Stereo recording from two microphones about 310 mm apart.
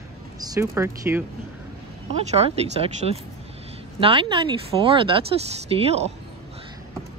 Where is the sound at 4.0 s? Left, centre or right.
Centre.